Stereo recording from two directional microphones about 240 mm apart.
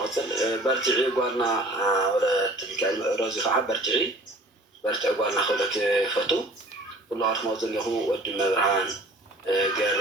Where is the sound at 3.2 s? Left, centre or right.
Centre.